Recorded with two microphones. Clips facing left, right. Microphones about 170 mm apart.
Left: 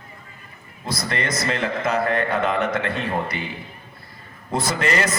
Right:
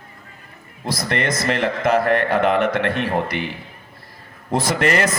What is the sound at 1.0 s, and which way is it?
A man's voice, 55° right (ahead or behind).